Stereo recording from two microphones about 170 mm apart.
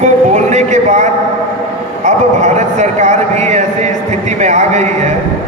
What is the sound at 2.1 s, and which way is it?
A man's voice, 45° right (ahead or behind).